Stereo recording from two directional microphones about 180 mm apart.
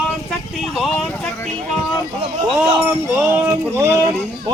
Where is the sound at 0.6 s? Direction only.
Centre (ahead or behind).